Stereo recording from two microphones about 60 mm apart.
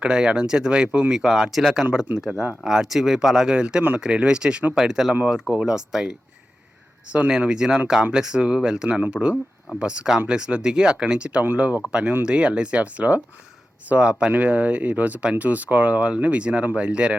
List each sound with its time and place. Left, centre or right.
0.0 s speech: centre